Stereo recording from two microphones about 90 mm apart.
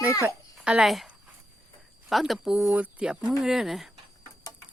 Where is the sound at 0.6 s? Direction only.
10° right (ahead or behind).